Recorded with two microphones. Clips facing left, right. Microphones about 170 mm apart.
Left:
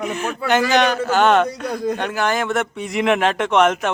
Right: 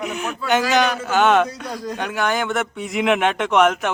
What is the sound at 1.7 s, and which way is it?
Speech, 55° left (ahead or behind).